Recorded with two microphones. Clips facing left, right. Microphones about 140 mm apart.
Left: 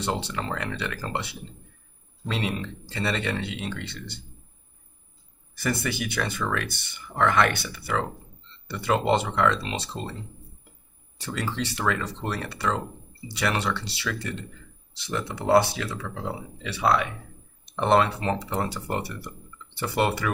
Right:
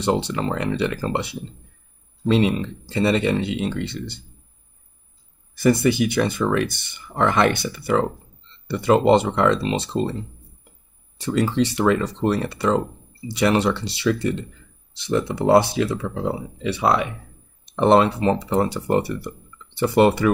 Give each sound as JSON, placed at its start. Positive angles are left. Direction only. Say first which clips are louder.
{"t": 0.0, "sound": "speech", "louder": "right 8 dB", "side_deg": -20}
{"t": 5.6, "sound": "speech", "louder": "right 11 dB", "side_deg": -20}
{"t": 11.1, "sound": "speech", "louder": "right 10 dB", "side_deg": -20}